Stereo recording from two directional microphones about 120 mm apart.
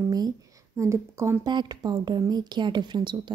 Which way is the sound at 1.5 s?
35° right (ahead or behind).